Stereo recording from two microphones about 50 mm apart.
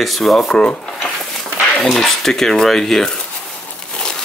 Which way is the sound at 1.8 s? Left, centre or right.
Centre.